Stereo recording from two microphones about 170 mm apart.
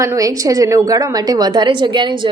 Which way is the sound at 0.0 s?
20° right (ahead or behind).